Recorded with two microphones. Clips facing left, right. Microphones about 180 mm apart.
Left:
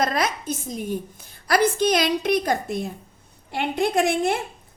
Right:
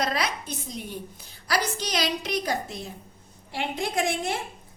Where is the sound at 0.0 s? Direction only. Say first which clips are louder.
Left 4 dB; 50° left (ahead or behind).